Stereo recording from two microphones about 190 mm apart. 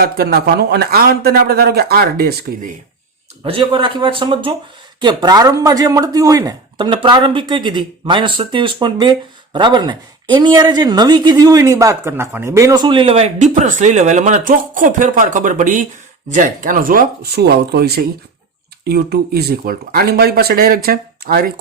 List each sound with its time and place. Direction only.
0.0 s a man's voice: 55° right (ahead or behind)
3.4 s a man's voice: 25° right (ahead or behind); by 21.4 s 50° right (ahead or behind)